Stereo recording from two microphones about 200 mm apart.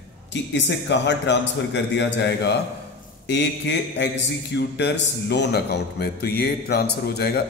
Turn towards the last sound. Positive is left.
turn(degrees=50)  # may be behind; listen again after turning